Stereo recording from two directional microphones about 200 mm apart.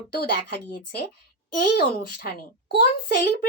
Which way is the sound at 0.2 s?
50° left (ahead or behind).